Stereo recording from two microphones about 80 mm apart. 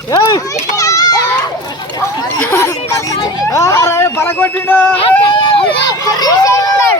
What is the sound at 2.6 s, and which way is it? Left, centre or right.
Speech, left.